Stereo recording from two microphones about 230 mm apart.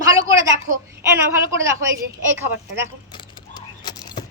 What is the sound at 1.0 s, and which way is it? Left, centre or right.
Speech, centre.